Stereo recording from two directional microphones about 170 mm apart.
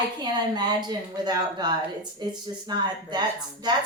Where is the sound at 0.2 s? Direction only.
25° right (ahead or behind).